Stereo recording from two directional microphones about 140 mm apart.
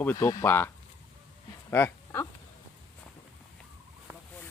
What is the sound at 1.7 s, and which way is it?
Speech, 15° left (ahead or behind).